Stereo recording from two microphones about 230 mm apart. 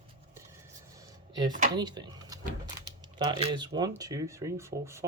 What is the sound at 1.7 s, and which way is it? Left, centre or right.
Speech, centre.